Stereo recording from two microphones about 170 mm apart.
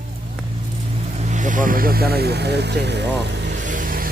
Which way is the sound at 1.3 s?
50° right (ahead or behind).